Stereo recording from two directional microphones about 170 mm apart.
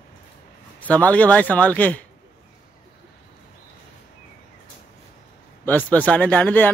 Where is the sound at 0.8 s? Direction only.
10° left (ahead or behind).